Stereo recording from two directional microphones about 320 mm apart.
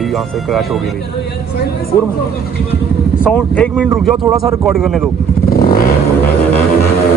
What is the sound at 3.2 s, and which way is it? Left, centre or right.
Speech, centre.